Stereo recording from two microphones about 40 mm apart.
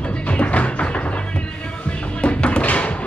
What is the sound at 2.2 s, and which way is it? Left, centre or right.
Music, left.